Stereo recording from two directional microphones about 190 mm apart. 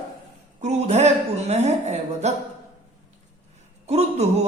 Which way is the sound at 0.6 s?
35° right (ahead or behind).